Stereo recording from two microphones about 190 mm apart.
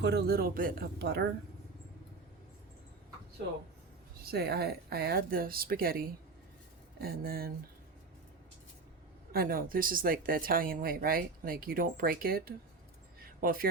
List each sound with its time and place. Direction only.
0.0 s speech: 60° right (ahead or behind)
4.2 s speech: 55° right (ahead or behind)
9.3 s speech: 50° right (ahead or behind)
13.2 s a sound: 50° right (ahead or behind)